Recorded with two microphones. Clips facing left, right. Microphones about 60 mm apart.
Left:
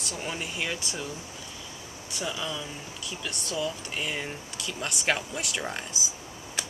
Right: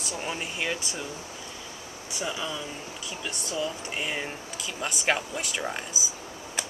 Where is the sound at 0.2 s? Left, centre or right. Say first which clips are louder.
Right 1 dB; centre.